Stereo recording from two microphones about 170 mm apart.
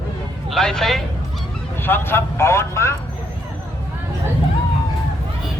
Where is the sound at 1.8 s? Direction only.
15° left (ahead or behind).